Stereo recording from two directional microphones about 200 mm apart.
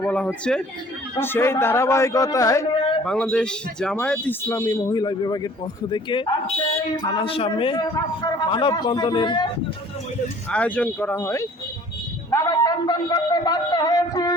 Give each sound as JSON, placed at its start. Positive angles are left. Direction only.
{"t": 0.0, "sound": "a man's voice", "side_deg": 5}
{"t": 3.0, "sound": "a man's voice", "side_deg": 5}
{"t": 10.5, "sound": "a man's voice", "side_deg": 5}
{"t": 12.3, "sound": "a sound", "side_deg": 15}